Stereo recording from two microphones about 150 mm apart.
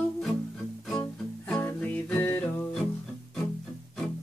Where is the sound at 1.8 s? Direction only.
10° left (ahead or behind).